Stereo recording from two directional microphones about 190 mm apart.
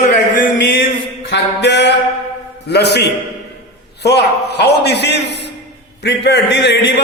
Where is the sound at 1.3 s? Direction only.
65° left (ahead or behind).